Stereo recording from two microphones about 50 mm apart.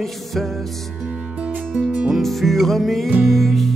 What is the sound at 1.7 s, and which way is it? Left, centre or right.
Music, centre.